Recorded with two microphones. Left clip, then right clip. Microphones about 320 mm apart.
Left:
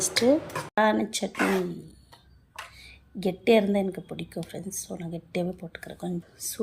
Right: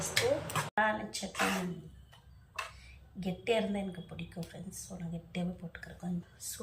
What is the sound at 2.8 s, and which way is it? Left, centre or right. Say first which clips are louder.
Speech: left 14 dB; centre.